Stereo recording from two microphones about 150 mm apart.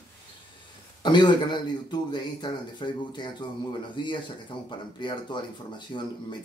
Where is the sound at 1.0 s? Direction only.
30° left (ahead or behind).